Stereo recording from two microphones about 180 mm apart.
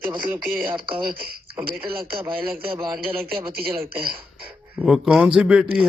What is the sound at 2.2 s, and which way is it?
Speech, 10° right (ahead or behind).